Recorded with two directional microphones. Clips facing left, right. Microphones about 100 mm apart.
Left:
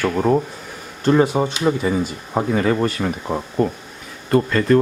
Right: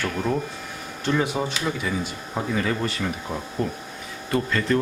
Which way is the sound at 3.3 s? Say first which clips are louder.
Left 7 dB; 65° left (ahead or behind).